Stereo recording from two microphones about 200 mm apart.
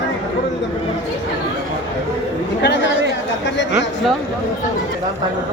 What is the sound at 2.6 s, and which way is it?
Chatter, 60° left (ahead or behind).